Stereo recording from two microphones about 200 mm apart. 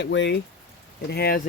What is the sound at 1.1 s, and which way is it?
Speech, 50° left (ahead or behind).